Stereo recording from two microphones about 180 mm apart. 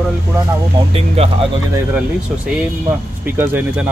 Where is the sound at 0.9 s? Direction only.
35° right (ahead or behind).